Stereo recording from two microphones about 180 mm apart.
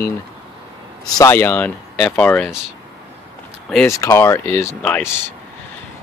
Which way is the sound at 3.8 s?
15° left (ahead or behind).